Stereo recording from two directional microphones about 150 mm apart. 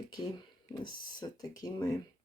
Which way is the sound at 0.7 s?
30° left (ahead or behind).